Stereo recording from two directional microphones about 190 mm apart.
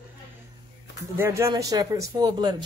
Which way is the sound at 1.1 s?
15° right (ahead or behind).